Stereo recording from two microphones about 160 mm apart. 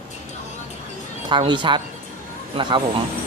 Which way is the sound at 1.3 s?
30° right (ahead or behind).